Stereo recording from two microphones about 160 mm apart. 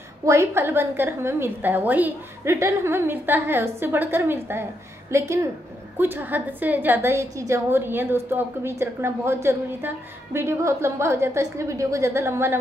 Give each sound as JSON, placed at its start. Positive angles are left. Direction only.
{"t": 0.2, "sound": "a woman's voice", "side_deg": -20}